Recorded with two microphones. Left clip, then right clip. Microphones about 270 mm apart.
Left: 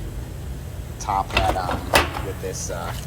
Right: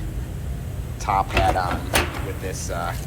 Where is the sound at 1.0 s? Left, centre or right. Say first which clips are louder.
Right 1 dB; centre.